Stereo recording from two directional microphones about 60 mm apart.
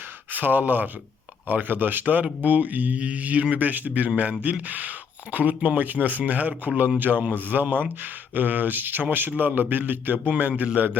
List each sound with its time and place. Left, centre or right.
0.3 s speech: right